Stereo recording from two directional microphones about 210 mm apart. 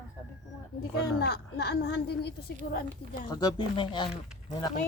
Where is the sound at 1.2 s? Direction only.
50° left (ahead or behind).